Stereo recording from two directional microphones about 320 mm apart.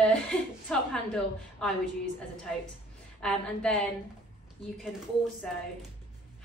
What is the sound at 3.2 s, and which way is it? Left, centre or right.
Speech, centre.